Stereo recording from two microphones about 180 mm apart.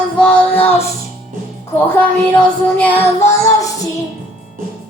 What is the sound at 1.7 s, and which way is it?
Child singing, 10° left (ahead or behind).